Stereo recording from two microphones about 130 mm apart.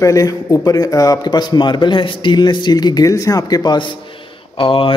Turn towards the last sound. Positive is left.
turn(degrees=45)  # may be behind; listen again after turning